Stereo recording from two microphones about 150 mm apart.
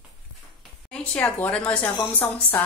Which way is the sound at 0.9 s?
10° left (ahead or behind).